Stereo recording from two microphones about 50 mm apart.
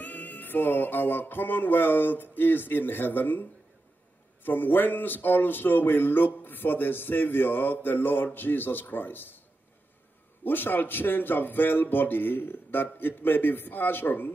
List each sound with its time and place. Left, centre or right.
0.0 s speech: left
10.4 s speech: left